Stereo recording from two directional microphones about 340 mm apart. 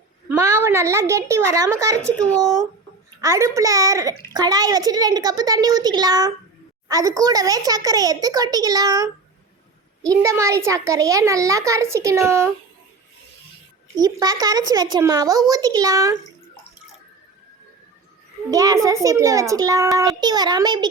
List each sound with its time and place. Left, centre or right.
0.3 s a child's voice: centre
2.0 s speech: centre
3.2 s a child's voice: centre
13.9 s a child's voice: centre
18.5 s a child's voice: centre